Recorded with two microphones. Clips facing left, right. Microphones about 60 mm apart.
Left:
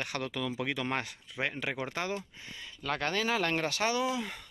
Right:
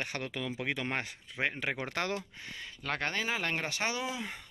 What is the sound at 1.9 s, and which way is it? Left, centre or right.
Speech, right.